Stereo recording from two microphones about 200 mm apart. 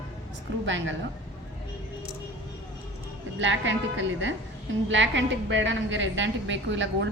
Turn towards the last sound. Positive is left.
turn(degrees=-65)  # may be behind; listen again after turning